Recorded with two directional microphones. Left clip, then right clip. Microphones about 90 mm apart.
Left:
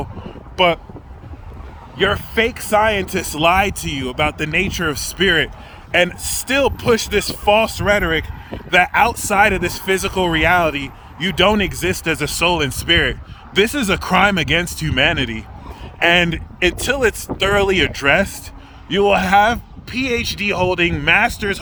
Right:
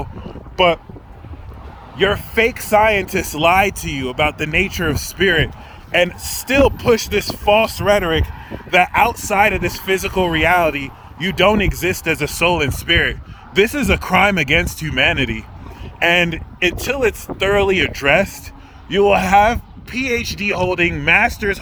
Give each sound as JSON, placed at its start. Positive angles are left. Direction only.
{"t": 0.5, "sound": "speech", "side_deg": 40}
{"t": 2.0, "sound": "speech", "side_deg": 25}
{"t": 2.3, "sound": "speech", "side_deg": 15}
{"t": 5.9, "sound": "speech", "side_deg": 50}
{"t": 6.2, "sound": "speech", "side_deg": 30}
{"t": 7.7, "sound": "speech", "side_deg": 15}
{"t": 8.7, "sound": "speech", "side_deg": 40}